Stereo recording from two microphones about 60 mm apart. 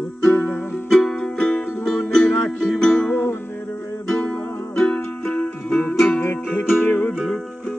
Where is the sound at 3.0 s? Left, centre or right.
Left.